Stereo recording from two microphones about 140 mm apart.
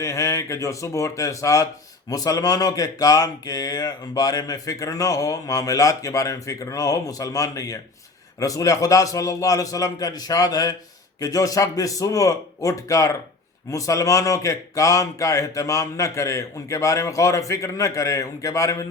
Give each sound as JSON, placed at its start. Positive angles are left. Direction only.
{"t": 0.0, "sound": "speech", "side_deg": 20}